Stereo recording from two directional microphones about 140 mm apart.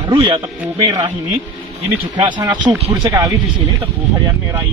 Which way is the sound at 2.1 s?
35° right (ahead or behind).